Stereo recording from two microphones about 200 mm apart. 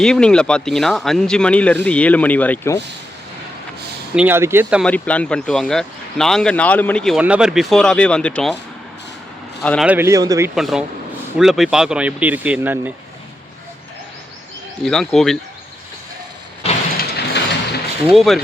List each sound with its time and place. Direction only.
0.0 s speech: 5° left (ahead or behind)
4.1 s speech: 10° right (ahead or behind)
4.8 s speech: 5° left (ahead or behind)
9.8 s speech: 10° right (ahead or behind)
10.5 s speech: centre (ahead or behind)
14.8 s speech: centre (ahead or behind)
17.0 s a sound: 55° left (ahead or behind)
18.1 s speech: centre (ahead or behind)